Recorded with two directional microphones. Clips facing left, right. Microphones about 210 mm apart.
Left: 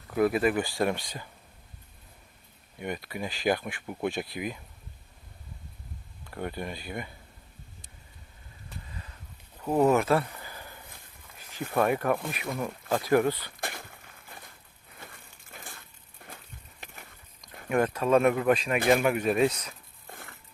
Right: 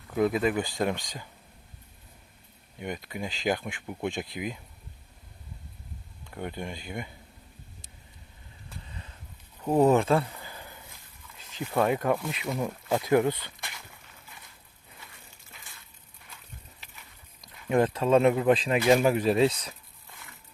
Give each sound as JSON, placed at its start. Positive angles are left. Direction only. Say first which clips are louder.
{"t": 0.6, "sound": "speech", "louder": "left 1 dB", "side_deg": -20}
{"t": 2.8, "sound": "speech", "louder": "left 1 dB", "side_deg": -15}
{"t": 6.3, "sound": "speech", "louder": "left 1 dB", "side_deg": -15}
{"t": 9.6, "sound": "speech", "louder": "right 1 dB", "side_deg": -25}
{"t": 13.6, "sound": "a sound", "louder": "left 7 dB", "side_deg": 55}
{"t": 15.0, "sound": "crushing", "louder": "left 6 dB", "side_deg": 50}
{"t": 16.8, "sound": "a sound", "louder": "left 6 dB", "side_deg": 50}
{"t": 17.7, "sound": "speech", "louder": "right 1 dB", "side_deg": -25}
{"t": 20.1, "sound": "a sound", "louder": "left 6 dB", "side_deg": 55}